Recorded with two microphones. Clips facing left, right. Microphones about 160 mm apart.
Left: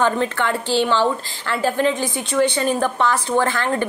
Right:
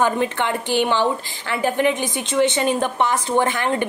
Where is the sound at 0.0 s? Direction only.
15° right (ahead or behind).